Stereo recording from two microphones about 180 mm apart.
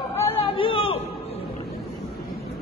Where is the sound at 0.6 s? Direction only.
30° left (ahead or behind).